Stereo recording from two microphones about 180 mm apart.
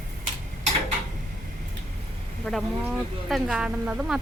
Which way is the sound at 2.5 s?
5° left (ahead or behind).